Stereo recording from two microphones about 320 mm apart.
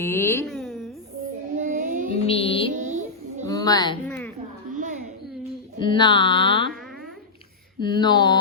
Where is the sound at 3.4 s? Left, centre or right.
Centre.